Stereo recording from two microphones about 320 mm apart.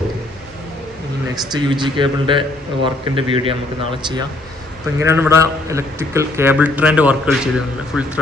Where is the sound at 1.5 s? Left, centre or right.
Centre.